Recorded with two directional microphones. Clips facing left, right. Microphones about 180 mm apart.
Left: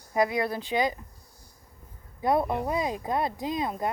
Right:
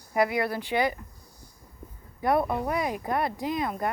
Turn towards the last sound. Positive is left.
turn(degrees=20)  # may be behind; listen again after turning